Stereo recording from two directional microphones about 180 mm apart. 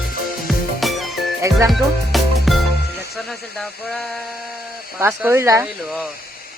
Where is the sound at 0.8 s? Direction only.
Centre (ahead or behind).